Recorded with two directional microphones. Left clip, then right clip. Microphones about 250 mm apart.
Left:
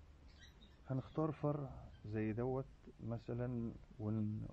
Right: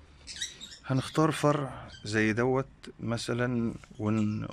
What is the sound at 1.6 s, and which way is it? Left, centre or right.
Speech, right.